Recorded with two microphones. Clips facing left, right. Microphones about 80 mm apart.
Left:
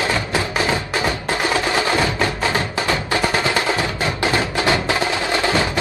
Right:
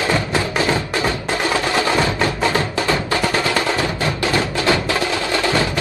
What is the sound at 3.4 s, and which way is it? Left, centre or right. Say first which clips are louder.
Music: right 1 dB; left.